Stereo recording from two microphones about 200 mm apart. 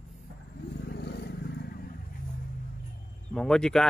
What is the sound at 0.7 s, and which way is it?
Vehicle, 55° left (ahead or behind).